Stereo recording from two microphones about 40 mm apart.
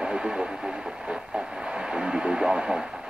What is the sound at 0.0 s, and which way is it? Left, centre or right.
Vehicle, centre.